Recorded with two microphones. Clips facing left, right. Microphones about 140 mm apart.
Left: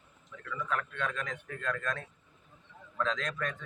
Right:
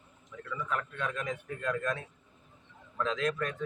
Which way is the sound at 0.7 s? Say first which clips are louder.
Left 1 dB; 10° right (ahead or behind).